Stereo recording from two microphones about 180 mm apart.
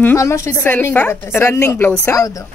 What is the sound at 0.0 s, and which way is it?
A woman's voice, 15° left (ahead or behind).